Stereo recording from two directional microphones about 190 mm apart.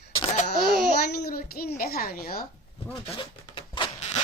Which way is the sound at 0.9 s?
50° left (ahead or behind).